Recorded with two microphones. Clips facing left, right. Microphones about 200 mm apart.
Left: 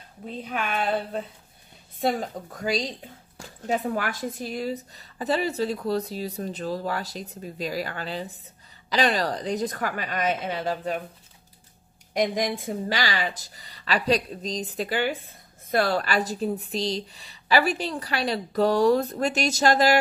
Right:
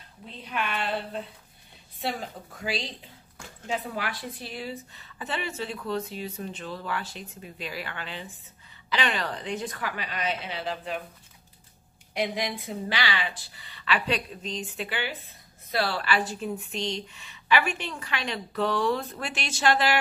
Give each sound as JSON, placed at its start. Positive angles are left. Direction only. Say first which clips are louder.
{"t": 0.2, "sound": "a woman's voice", "louder": "left 3 dB", "side_deg": 45}
{"t": 12.1, "sound": "speech", "louder": "left 5 dB", "side_deg": 45}